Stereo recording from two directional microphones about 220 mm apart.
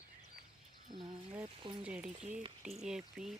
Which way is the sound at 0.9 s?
20° right (ahead or behind).